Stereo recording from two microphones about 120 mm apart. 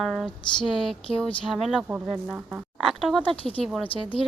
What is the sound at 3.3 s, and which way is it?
Speech, 50° left (ahead or behind).